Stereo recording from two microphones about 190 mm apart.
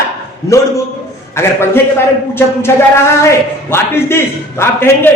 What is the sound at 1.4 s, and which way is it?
Speech, 15° left (ahead or behind).